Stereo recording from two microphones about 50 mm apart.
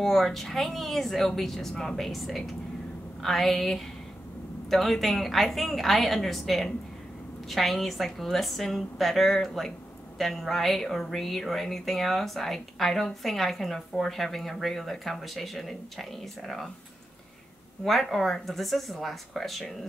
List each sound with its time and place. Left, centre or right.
0.0 s speech: centre
17.8 s speech: centre